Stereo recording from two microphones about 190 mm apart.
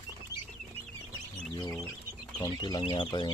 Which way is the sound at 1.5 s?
20° left (ahead or behind).